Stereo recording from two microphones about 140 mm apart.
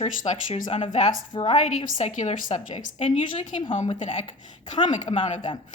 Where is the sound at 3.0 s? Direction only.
40° left (ahead or behind).